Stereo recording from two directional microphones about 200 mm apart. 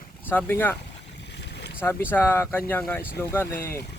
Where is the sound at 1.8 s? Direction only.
10° left (ahead or behind).